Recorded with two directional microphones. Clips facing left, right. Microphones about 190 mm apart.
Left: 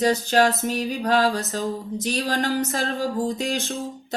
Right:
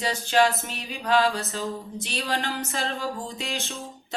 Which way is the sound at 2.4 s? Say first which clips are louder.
Left 6 dB; 35° left (ahead or behind).